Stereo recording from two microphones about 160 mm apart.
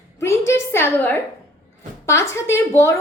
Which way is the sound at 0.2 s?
15° left (ahead or behind).